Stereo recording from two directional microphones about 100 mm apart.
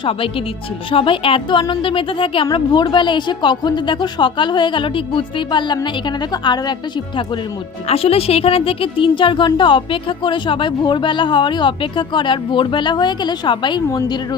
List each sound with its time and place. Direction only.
0.0 s a woman's voice: 65° left (ahead or behind)
2.5 s speech: 45° left (ahead or behind)
7.9 s a woman's voice: 75° left (ahead or behind); by 13.8 s 50° left (ahead or behind)